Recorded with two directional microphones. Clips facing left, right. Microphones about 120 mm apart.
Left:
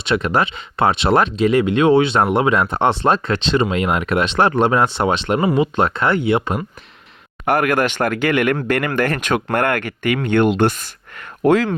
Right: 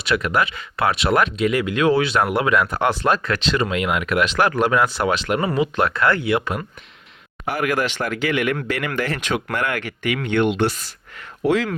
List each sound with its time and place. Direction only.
0.0 s speech: 25° left (ahead or behind)
7.4 s speech: 55° left (ahead or behind)